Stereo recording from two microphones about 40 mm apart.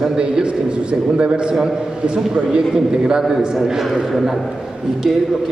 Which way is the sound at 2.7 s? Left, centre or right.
Centre.